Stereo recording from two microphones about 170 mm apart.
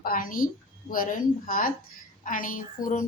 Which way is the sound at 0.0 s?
55° left (ahead or behind).